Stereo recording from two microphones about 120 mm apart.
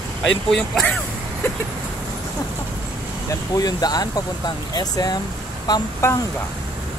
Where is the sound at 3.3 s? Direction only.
30° left (ahead or behind).